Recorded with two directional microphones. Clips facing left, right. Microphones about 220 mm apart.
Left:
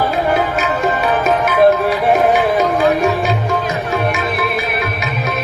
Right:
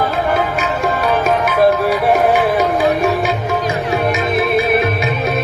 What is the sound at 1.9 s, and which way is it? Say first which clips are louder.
Music: even; centre (ahead or behind).